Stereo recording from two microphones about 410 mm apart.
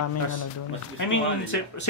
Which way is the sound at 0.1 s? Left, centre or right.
Left.